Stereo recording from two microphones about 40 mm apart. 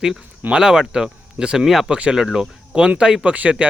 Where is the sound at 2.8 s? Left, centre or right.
Right.